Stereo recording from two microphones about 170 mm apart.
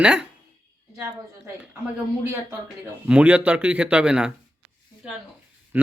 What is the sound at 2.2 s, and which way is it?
A man's voice, 15° right (ahead or behind).